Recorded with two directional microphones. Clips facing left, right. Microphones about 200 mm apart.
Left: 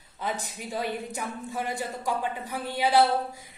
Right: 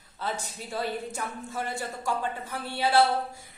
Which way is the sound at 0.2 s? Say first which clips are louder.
Left 1 dB; 15° left (ahead or behind).